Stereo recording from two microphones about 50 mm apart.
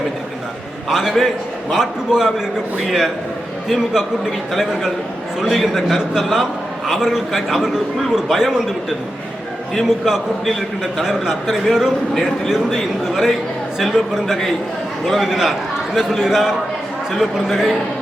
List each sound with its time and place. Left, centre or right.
0.9 s a man's voice: centre
11.0 s a man's voice: centre